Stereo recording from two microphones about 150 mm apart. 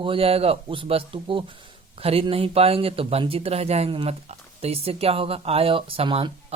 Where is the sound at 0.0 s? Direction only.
35° right (ahead or behind).